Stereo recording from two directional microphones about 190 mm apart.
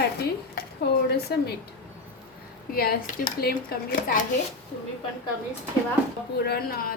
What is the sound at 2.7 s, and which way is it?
Speech, 50° left (ahead or behind).